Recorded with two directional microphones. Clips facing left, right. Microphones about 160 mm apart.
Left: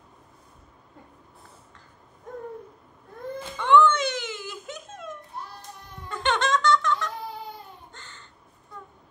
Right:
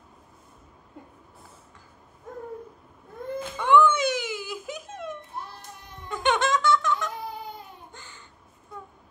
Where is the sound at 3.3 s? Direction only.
5° right (ahead or behind).